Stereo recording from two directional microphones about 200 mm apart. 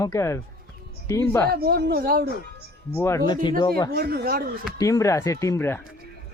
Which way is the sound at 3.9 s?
50° right (ahead or behind).